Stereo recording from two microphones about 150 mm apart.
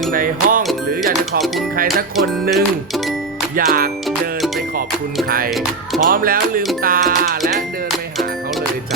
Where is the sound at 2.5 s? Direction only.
Centre (ahead or behind).